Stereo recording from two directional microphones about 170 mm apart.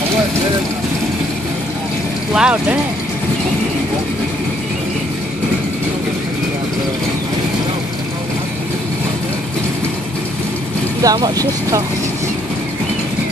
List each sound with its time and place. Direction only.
2.3 s speech: 5° right (ahead or behind)
11.0 s speech: 20° right (ahead or behind)